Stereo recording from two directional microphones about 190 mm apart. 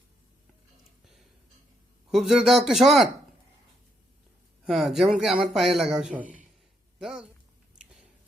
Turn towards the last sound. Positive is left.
turn(degrees=0)  # may be behind; listen again after turning